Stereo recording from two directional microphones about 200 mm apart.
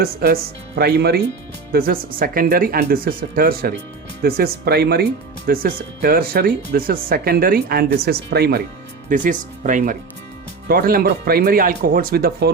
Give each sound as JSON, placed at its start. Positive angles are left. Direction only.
{"t": 0.0, "sound": "speech", "side_deg": -50}
{"t": 9.0, "sound": "speech", "side_deg": -40}